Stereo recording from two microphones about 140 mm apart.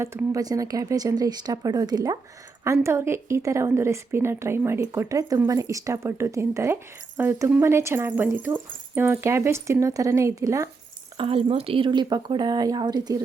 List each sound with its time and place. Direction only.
0.3 s a woman's voice: 25° right (ahead or behind)
11.2 s speech: 40° right (ahead or behind)